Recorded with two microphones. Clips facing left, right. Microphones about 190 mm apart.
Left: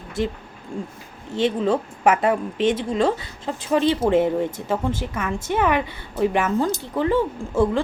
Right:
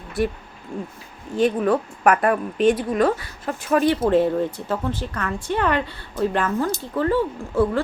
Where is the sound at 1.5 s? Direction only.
25° left (ahead or behind).